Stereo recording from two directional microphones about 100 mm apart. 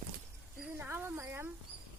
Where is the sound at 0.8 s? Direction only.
25° right (ahead or behind).